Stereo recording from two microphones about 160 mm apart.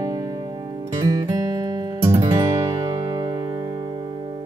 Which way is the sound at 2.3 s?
20° right (ahead or behind).